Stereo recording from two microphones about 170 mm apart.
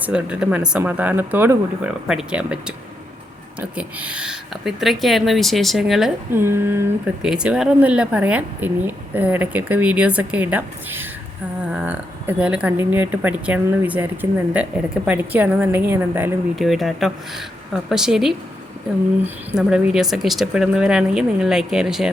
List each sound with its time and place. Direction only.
0.0 s speech: 5° right (ahead or behind)
6.3 s speech: 15° right (ahead or behind)
16.6 s speech: centre (ahead or behind)
19.5 s speech: 5° right (ahead or behind)